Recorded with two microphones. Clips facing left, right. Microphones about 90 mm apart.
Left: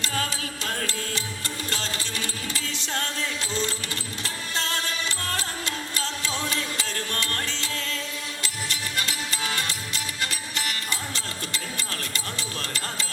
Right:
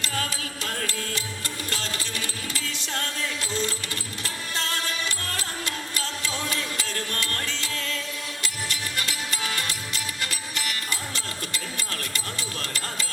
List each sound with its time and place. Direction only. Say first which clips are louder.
0.0 s music: left 1 dB; 25° left (ahead or behind)
1.7 s music: even; 25° left (ahead or behind)
4.2 s music: left 1 dB; 25° left (ahead or behind)
9.0 s music: left 2 dB; 25° left (ahead or behind)